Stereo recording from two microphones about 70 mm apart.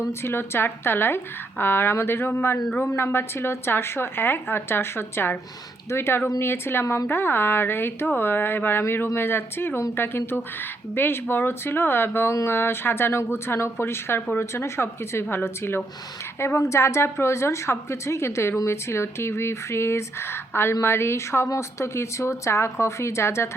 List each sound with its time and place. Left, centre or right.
0.1 s a woman's voice: left